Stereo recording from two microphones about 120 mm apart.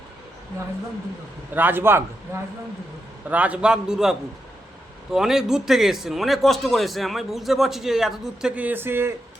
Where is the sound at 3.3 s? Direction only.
10° right (ahead or behind).